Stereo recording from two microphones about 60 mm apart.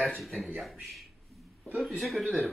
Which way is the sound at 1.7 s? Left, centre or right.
Centre.